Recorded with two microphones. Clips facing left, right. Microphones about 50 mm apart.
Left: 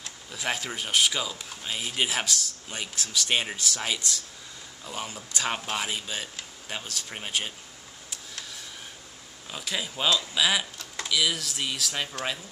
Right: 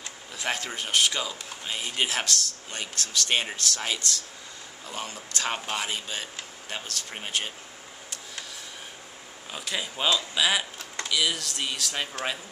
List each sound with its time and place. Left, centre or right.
0.0 s speech: centre
4.8 s speech: centre
9.5 s speech: centre